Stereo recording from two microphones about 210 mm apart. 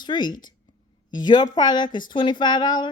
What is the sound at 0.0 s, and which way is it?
Speech, 20° left (ahead or behind).